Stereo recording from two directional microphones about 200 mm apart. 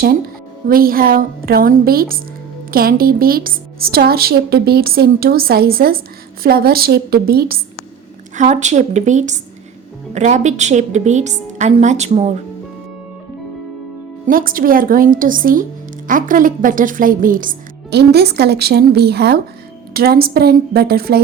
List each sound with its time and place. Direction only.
0.7 s a woman's voice: 45° right (ahead or behind)
8.4 s a woman's voice: 35° right (ahead or behind)
14.3 s a woman's voice: 45° right (ahead or behind)